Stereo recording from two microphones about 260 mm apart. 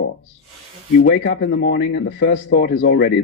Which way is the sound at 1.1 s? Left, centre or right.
Left.